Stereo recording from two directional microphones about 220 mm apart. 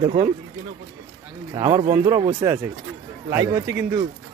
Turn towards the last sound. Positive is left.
turn(degrees=-15)  # may be behind; listen again after turning